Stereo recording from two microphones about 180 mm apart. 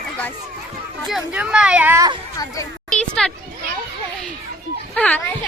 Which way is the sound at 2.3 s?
20° left (ahead or behind).